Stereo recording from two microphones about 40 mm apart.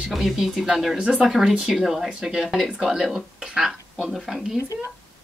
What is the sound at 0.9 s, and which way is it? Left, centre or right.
Speech, right.